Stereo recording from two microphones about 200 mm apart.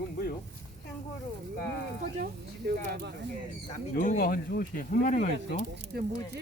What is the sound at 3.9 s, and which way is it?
Speech, 40° left (ahead or behind).